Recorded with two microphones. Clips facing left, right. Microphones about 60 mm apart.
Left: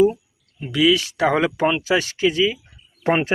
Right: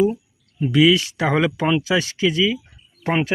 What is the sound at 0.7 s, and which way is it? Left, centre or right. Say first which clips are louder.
Speech: right 2 dB; centre.